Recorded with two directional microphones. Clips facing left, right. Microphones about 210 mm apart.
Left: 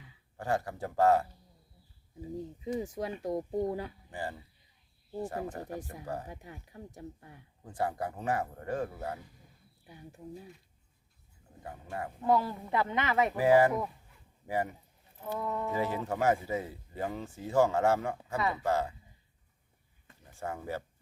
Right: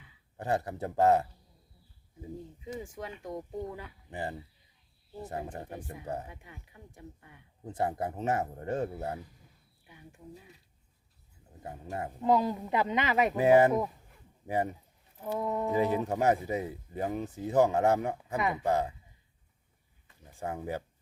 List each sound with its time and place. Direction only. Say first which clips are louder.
0.3 s speech: right 1 dB; 20° right (ahead or behind)
2.7 s speech: left 5 dB; 35° left (ahead or behind)
4.1 s speech: right 7 dB; 20° right (ahead or behind)
6.2 s speech: left 4 dB; 40° left (ahead or behind)
7.6 s speech: right 2 dB; 20° right (ahead or behind)
9.8 s speech: left 3 dB; 35° left (ahead or behind)
11.6 s a man's voice: right 2 dB; 25° right (ahead or behind)
20.3 s speech: right 2 dB; 15° right (ahead or behind)